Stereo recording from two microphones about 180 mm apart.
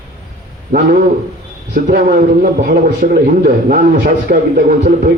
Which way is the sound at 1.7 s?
55° right (ahead or behind).